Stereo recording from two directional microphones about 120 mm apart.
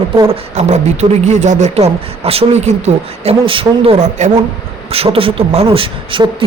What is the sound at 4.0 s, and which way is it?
Speech, 80° right.